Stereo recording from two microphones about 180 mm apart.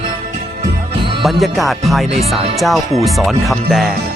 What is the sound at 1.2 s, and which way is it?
Speech, centre (ahead or behind).